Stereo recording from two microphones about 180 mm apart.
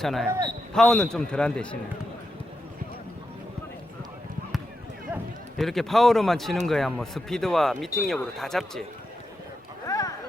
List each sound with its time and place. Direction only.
0.0 s speech: centre (ahead or behind)
0.3 s a man's voice: 20° right (ahead or behind)
0.7 s speech: 5° left (ahead or behind)
5.5 s speech: centre (ahead or behind)
9.8 s a sound: 20° left (ahead or behind)